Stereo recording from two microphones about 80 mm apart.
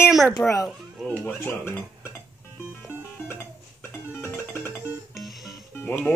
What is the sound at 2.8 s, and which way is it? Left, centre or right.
Music, left.